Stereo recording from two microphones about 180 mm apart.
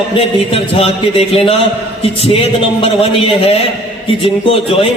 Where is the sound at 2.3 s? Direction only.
30° left (ahead or behind).